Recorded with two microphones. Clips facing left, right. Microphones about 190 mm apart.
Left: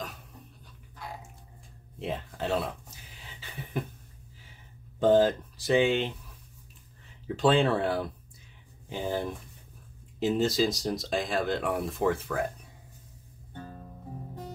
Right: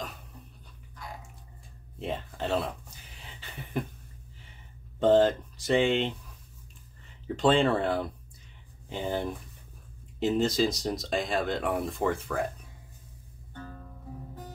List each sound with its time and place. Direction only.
2.0 s a sound: centre (ahead or behind)
5.0 s speech: centre (ahead or behind)
7.3 s speech: centre (ahead or behind)
13.5 s music: 25° left (ahead or behind)